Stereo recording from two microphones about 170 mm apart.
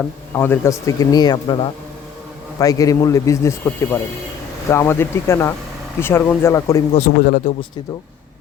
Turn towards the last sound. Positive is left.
turn(degrees=25)  # may be behind; listen again after turning